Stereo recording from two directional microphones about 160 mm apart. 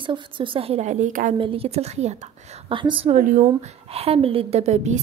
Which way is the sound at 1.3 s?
35° right (ahead or behind).